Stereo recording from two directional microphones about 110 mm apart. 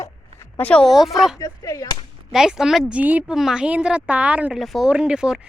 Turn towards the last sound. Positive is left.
turn(degrees=-5)  # may be behind; listen again after turning